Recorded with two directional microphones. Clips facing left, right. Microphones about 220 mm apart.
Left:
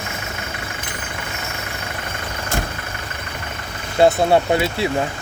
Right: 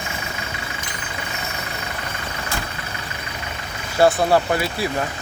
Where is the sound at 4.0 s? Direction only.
25° left (ahead or behind).